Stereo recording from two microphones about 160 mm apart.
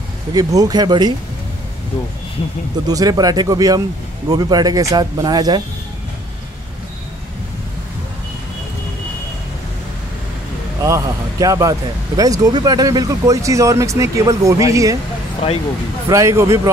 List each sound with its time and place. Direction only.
0.3 s speech: 25° right (ahead or behind)
2.9 s speech: 25° right (ahead or behind)
10.8 s speech: 20° right (ahead or behind)
16.1 s speech: 20° right (ahead or behind)